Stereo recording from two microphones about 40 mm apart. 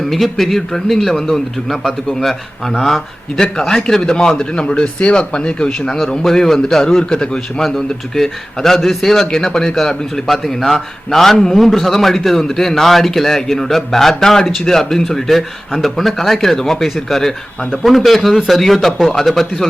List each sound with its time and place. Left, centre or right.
0.0 s a man's voice: centre; by 5.9 s left
6.2 s a man's voice: centre
10.2 s a man's voice: centre